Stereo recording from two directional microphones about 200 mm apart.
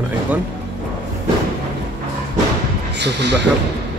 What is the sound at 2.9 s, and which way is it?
Speech, 60° right (ahead or behind).